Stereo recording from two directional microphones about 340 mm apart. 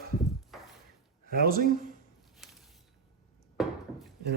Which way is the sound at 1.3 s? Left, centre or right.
Right.